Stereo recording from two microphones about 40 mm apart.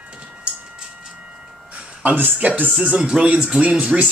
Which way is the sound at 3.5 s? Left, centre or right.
Right.